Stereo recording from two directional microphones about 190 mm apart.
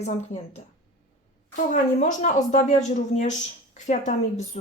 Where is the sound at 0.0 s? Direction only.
35° left (ahead or behind).